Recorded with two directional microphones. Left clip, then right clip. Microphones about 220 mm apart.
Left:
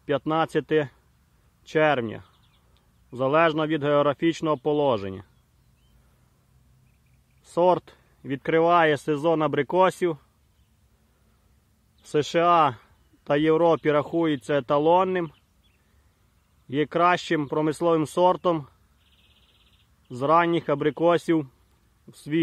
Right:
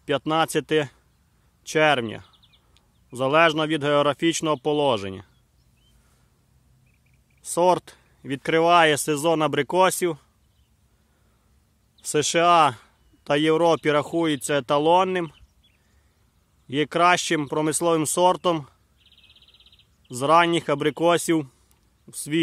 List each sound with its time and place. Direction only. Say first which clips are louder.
0.0 s speech: right 2 dB; 10° right (ahead or behind)
7.4 s speech: right 1 dB; 5° right (ahead or behind)
12.0 s speech: right 2 dB; 5° right (ahead or behind)
16.6 s speech: right 2 dB; 10° right (ahead or behind)
20.1 s speech: right 2 dB; 10° right (ahead or behind)